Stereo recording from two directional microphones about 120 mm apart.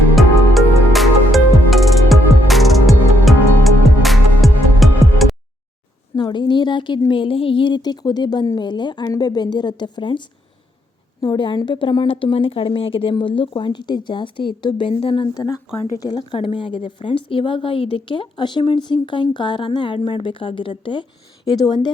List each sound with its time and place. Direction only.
0.2 s music: centre (ahead or behind)
6.1 s a sound: 35° left (ahead or behind)
7.1 s a woman's voice: 45° left (ahead or behind)
15.4 s a woman's voice: 30° left (ahead or behind)